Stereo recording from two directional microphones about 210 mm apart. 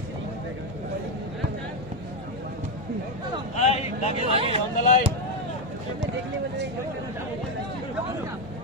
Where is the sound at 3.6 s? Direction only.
30° left (ahead or behind).